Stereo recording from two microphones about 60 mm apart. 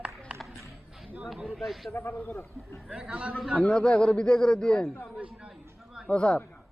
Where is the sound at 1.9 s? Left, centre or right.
Left.